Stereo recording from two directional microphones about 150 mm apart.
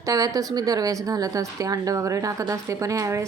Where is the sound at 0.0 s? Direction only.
25° right (ahead or behind).